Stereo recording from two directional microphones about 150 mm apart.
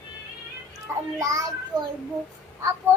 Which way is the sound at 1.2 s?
20° right (ahead or behind).